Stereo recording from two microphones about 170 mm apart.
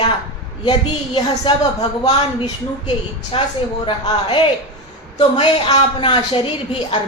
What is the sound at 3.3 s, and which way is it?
A man's voice, 35° left (ahead or behind).